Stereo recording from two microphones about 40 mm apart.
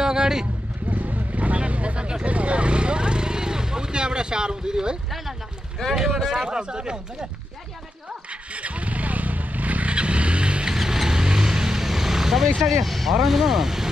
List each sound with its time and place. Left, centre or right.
0.0 s vehicle: centre
0.8 s vehicle: right
6.2 s speech: centre
8.3 s vehicle: right
10.7 s vehicle: centre
12.6 s speech: centre